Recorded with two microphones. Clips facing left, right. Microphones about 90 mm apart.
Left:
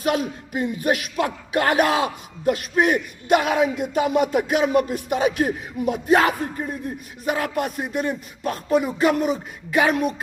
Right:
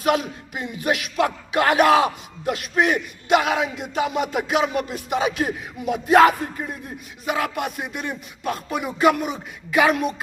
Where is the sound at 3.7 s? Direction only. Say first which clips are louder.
Left 3 dB; 50° left (ahead or behind).